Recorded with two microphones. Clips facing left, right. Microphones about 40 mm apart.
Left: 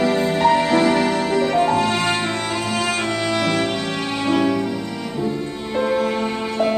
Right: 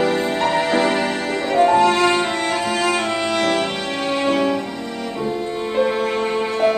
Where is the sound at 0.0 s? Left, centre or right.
Centre.